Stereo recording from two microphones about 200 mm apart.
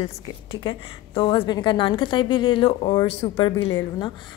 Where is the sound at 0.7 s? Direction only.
25° left (ahead or behind).